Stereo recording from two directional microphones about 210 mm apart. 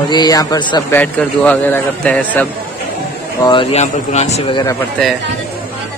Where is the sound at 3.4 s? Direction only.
25° left (ahead or behind).